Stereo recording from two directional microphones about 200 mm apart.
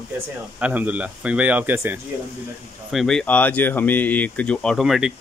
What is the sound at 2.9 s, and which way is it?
Speech, centre (ahead or behind).